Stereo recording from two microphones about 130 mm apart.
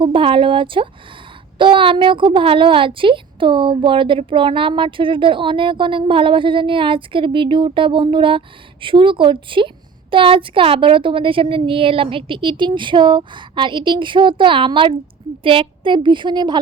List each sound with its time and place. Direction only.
0.0 s a woman's voice: 40° right (ahead or behind)